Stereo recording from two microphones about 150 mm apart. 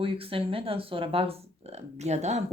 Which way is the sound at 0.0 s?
35° right (ahead or behind).